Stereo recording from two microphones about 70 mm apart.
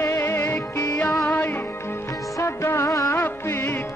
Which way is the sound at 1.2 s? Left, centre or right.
Left.